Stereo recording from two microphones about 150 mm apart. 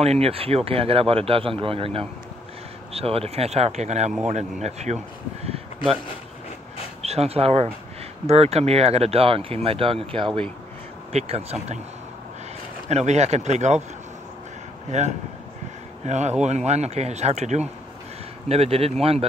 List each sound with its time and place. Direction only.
0.0 s speech: 45° right (ahead or behind)
7.0 s speech: 45° right (ahead or behind)
12.9 s speech: 50° right (ahead or behind)
14.9 s speech: 50° right (ahead or behind)